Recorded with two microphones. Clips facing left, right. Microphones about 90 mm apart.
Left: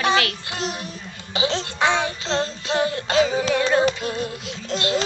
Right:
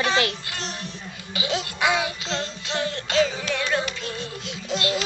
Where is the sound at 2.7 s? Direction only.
10° left (ahead or behind).